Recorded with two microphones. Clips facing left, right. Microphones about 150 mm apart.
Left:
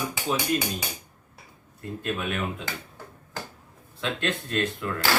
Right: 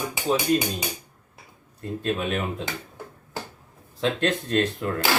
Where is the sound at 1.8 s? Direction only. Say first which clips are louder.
Right 4 dB; 35° right (ahead or behind).